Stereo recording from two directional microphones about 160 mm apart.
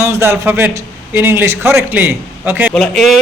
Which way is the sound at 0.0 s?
15° right (ahead or behind).